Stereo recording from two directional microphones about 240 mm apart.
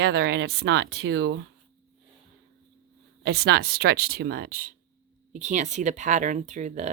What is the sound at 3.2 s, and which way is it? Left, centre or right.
A woman's voice, right.